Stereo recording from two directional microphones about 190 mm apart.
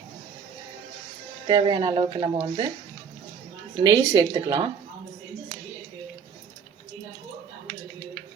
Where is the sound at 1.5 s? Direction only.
25° right (ahead or behind).